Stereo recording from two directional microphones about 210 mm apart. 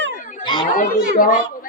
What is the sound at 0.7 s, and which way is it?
Speech, 40° left (ahead or behind).